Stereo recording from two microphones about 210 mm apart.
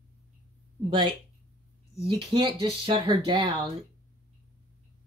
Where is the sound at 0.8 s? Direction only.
25° right (ahead or behind).